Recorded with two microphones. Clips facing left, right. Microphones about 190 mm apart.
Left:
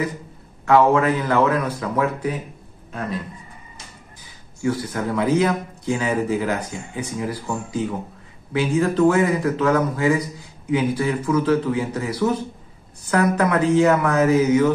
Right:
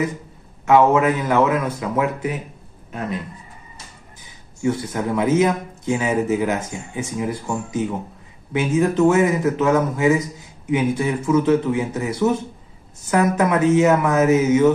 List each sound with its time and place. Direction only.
0.7 s a man's voice: 20° right (ahead or behind)
4.6 s a man's voice: 25° right (ahead or behind)